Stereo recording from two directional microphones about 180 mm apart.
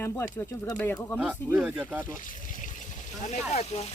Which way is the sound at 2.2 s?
45° left (ahead or behind).